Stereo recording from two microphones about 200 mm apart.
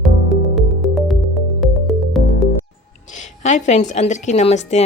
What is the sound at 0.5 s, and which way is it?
Music, centre (ahead or behind).